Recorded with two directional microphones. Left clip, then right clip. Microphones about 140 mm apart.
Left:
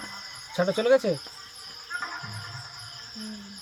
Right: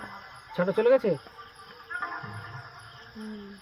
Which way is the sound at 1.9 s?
35° left (ahead or behind).